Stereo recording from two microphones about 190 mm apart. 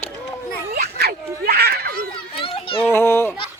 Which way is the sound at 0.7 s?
55° right (ahead or behind).